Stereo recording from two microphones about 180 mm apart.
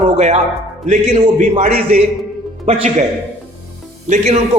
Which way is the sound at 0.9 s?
40° right (ahead or behind).